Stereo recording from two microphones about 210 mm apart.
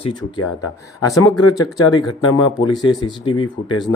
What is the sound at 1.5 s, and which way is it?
Speech, 15° left (ahead or behind).